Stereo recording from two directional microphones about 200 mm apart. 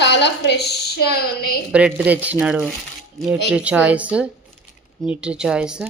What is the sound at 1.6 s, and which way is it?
Speech, 5° right (ahead or behind).